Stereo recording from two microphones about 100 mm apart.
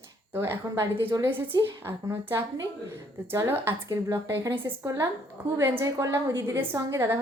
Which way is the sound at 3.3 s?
25° right (ahead or behind).